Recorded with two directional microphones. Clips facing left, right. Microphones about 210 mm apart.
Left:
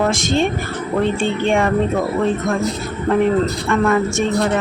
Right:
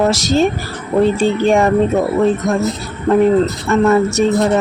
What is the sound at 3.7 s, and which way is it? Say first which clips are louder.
Speech: right 5 dB; 40° right (ahead or behind).